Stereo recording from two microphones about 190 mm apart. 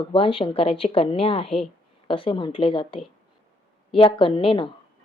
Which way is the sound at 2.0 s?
25° left (ahead or behind).